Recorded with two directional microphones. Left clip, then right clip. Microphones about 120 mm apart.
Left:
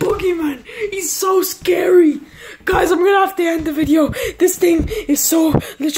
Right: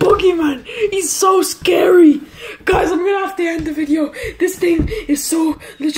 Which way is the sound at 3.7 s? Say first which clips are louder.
Left 3 dB; 65° left (ahead or behind).